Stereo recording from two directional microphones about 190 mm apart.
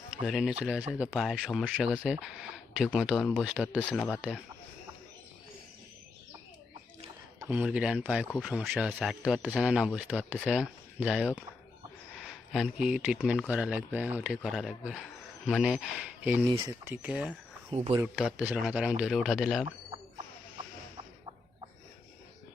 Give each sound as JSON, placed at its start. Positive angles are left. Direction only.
{"t": 0.1, "sound": "speech", "side_deg": 0}
{"t": 3.9, "sound": "speech", "side_deg": 5}
{"t": 7.3, "sound": "speech", "side_deg": -10}
{"t": 16.5, "sound": "speech", "side_deg": -20}
{"t": 16.9, "sound": "speech", "side_deg": -5}
{"t": 17.7, "sound": "speech", "side_deg": -35}
{"t": 17.9, "sound": "speech", "side_deg": -5}